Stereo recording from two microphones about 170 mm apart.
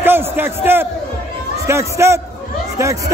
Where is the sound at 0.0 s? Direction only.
10° right (ahead or behind).